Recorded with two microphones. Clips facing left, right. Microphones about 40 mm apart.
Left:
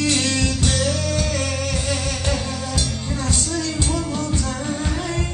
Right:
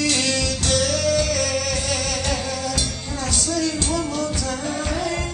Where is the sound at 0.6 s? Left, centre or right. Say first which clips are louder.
Right 2 dB; left.